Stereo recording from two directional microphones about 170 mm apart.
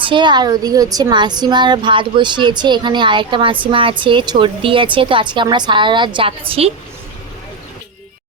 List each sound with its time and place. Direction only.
0.0 s a woman's voice: 30° right (ahead or behind)